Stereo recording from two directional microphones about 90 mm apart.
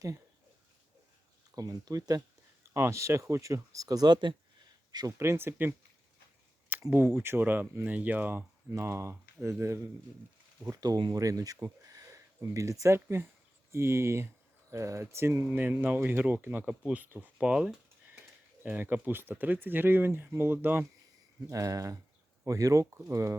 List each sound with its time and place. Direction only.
1.5 s speech: 45° right (ahead or behind)
2.7 s speech: 30° right (ahead or behind); by 5.1 s 50° right (ahead or behind)
5.1 s speech: 30° right (ahead or behind)
6.9 s speech: 25° right (ahead or behind)
10.6 s speech: 40° right (ahead or behind); by 20.8 s 20° right (ahead or behind)
21.5 s speech: 40° right (ahead or behind)